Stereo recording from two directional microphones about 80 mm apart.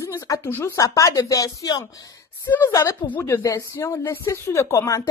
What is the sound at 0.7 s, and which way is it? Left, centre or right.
Speech, left.